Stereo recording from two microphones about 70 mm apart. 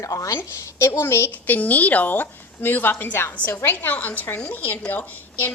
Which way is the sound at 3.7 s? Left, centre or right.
Left.